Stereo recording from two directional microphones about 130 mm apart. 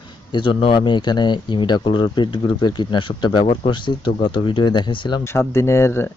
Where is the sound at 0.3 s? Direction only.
40° left (ahead or behind).